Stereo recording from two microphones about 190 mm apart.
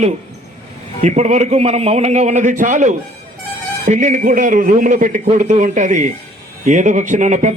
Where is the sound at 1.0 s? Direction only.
40° right (ahead or behind).